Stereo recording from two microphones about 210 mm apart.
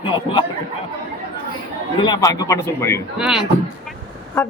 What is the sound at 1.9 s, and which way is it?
A woman's voice, 20° left (ahead or behind).